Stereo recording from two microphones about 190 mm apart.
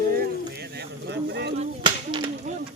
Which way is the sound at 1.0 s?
65° right (ahead or behind).